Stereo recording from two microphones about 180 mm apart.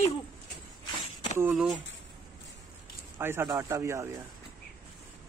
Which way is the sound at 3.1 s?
15° right (ahead or behind).